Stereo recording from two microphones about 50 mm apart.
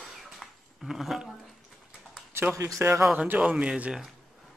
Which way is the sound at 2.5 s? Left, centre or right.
Right.